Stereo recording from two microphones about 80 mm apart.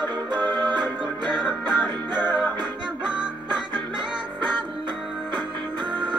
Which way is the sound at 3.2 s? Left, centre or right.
Right.